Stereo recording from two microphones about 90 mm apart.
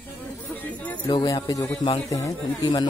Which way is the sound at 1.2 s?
40° left (ahead or behind).